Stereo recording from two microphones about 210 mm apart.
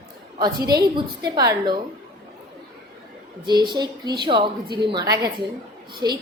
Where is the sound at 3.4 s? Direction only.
20° right (ahead or behind).